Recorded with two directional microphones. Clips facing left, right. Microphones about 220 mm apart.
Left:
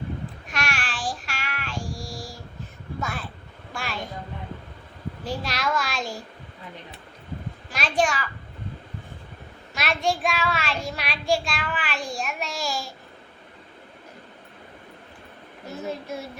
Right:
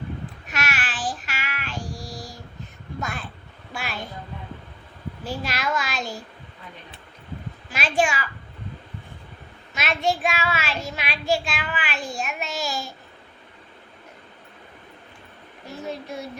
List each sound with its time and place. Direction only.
0.4 s child singing: 5° right (ahead or behind)
1.9 s a sound: 20° right (ahead or behind)
3.7 s a sound: 5° right (ahead or behind)
5.5 s child singing: 5° right (ahead or behind)
7.7 s child singing: 5° right (ahead or behind)
9.7 s child singing: centre (ahead or behind)